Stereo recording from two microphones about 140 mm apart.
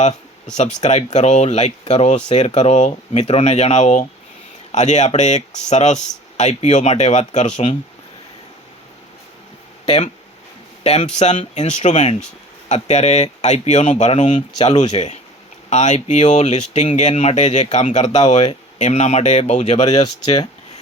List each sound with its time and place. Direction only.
0.5 s speech: 55° left (ahead or behind)
9.8 s speech: 50° left (ahead or behind)
20.0 s speech: 30° left (ahead or behind)